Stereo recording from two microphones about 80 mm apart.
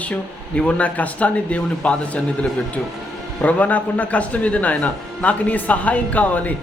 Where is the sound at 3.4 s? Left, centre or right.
Centre.